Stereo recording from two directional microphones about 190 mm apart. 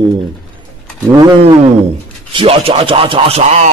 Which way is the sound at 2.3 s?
30° right (ahead or behind).